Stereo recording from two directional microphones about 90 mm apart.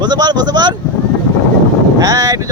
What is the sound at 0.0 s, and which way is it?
Speech, 50° right (ahead or behind).